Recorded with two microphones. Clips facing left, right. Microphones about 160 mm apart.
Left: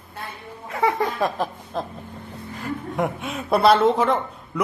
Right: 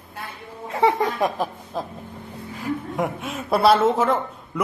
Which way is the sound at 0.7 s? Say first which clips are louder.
Right 2 dB; 25° right (ahead or behind).